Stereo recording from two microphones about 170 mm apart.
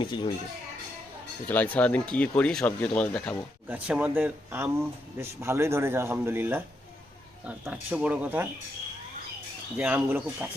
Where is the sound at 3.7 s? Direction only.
10° right (ahead or behind).